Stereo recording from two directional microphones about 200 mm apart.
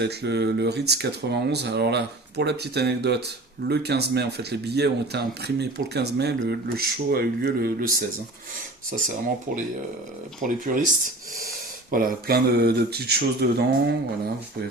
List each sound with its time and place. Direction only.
0.0 s speech: 55° right (ahead or behind)
10.4 s speech: 40° right (ahead or behind)